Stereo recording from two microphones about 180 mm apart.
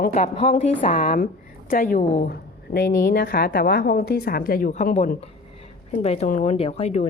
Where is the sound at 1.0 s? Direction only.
50° left (ahead or behind).